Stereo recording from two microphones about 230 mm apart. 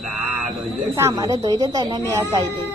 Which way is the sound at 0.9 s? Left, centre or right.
Centre.